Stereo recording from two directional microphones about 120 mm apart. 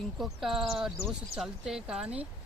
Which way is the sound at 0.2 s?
5° right (ahead or behind).